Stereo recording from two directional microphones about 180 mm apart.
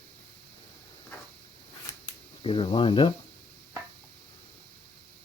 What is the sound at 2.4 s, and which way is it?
Speech, 30° left (ahead or behind).